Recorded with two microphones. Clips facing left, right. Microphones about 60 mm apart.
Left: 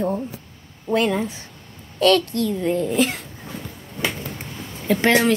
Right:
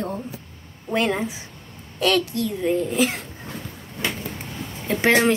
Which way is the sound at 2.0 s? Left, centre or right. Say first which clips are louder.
Left 4 dB; centre.